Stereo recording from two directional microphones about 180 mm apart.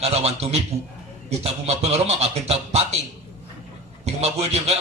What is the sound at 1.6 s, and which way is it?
Speech, 35° right (ahead or behind).